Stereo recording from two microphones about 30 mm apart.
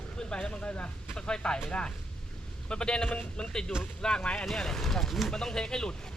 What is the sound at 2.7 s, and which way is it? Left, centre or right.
Speech, left.